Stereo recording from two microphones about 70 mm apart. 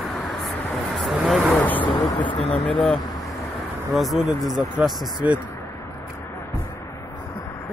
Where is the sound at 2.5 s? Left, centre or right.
Centre.